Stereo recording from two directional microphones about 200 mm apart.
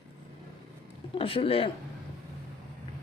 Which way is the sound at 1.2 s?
25° left (ahead or behind).